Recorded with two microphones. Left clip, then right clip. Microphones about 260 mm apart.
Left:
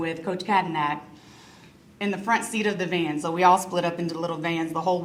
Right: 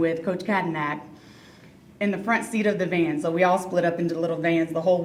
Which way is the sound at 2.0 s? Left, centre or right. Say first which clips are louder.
Even; centre.